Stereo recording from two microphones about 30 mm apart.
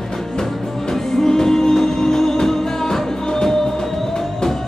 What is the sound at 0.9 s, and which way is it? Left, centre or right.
Music, centre.